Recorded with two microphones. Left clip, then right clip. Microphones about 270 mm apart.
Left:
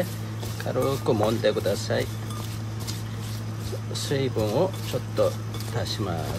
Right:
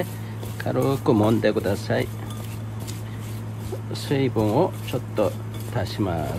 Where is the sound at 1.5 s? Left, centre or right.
Right.